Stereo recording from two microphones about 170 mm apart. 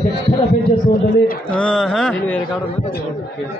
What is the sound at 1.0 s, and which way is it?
Speech, 65° left (ahead or behind).